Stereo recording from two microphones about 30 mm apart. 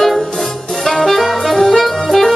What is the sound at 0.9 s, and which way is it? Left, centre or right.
Saxophone, centre.